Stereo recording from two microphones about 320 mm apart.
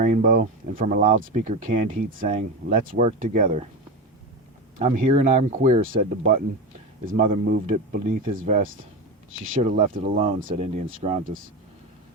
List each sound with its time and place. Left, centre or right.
0.0 s speech: right
4.8 s speech: right